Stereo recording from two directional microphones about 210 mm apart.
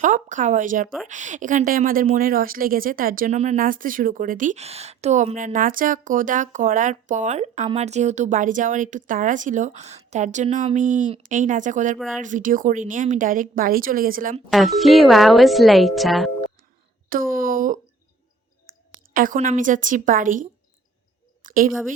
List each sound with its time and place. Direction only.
0.0 s speech: 35° right (ahead or behind)
14.5 s speech: centre (ahead or behind)
17.1 s speech: 40° right (ahead or behind)
19.1 s speech: 40° right (ahead or behind)
21.4 s a sound: 40° right (ahead or behind)